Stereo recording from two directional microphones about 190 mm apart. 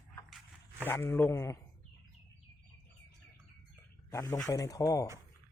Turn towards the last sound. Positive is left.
turn(degrees=20)  # may be behind; listen again after turning